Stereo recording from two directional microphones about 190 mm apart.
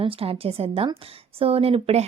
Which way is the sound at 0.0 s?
30° right (ahead or behind).